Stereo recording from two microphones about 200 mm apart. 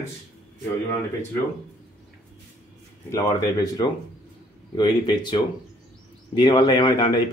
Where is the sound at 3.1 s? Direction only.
20° left (ahead or behind).